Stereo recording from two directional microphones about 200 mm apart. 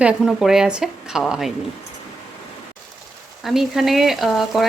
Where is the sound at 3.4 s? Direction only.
Centre (ahead or behind).